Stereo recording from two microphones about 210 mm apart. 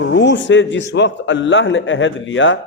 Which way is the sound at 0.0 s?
55° left (ahead or behind).